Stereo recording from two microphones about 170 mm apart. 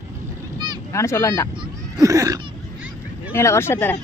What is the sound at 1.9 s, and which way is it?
Cat, 20° right (ahead or behind).